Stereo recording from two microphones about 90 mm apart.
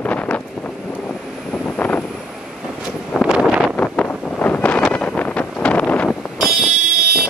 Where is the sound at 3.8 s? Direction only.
15° left (ahead or behind).